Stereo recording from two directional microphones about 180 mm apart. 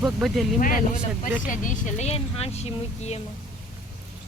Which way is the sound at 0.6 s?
50° left (ahead or behind).